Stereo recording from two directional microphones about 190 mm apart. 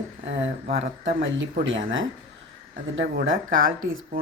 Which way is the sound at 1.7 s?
90° right.